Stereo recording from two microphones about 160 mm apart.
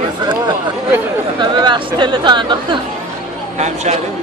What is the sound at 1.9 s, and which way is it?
Speech, 30° right (ahead or behind).